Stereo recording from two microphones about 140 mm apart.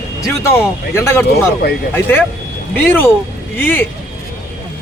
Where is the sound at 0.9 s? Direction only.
15° left (ahead or behind).